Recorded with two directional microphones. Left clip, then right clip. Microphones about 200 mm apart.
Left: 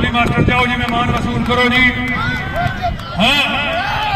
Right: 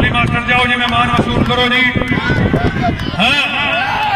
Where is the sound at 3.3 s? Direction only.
60° left (ahead or behind).